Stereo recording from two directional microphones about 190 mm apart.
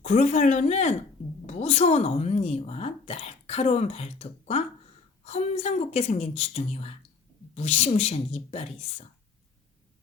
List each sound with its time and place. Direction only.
0.0 s a woman's voice: 40° left (ahead or behind)